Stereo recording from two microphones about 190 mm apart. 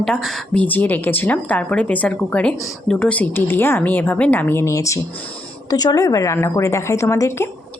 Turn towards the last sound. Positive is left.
turn(degrees=15)  # may be behind; listen again after turning